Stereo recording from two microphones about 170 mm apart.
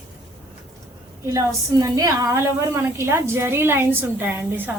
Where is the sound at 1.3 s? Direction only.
20° right (ahead or behind).